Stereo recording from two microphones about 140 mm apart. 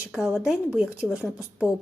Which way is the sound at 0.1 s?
5° right (ahead or behind).